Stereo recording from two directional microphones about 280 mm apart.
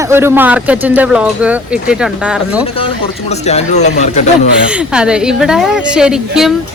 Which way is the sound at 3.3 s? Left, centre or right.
Left.